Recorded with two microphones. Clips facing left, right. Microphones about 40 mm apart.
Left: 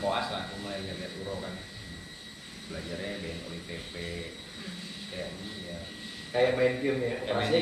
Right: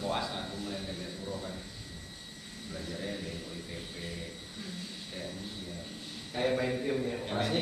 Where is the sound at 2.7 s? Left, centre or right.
Left.